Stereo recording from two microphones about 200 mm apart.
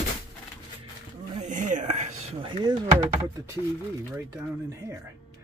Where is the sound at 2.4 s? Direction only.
25° right (ahead or behind).